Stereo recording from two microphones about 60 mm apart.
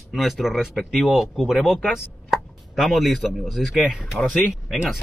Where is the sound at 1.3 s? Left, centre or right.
Centre.